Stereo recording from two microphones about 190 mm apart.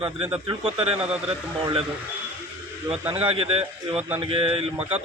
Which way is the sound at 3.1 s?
30° right (ahead or behind).